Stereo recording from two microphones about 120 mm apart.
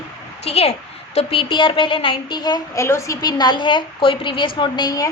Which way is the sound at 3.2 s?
35° left (ahead or behind).